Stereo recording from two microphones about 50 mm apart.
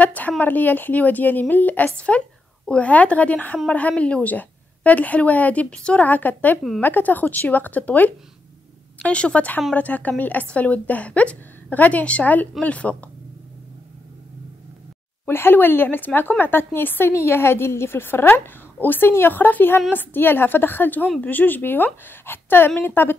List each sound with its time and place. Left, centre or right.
0.0 s a woman's voice: left
6.0 s a woman's voice: left
15.2 s a woman's voice: left
17.1 s a woman's voice: left